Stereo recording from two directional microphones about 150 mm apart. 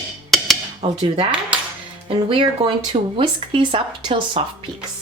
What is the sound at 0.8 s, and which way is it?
Speech, 30° right (ahead or behind).